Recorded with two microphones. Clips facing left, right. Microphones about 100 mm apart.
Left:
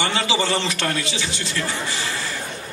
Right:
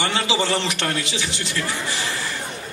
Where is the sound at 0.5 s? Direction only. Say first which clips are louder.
Even; 25° right (ahead or behind).